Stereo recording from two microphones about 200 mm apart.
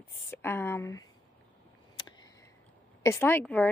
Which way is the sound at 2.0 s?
20° left (ahead or behind).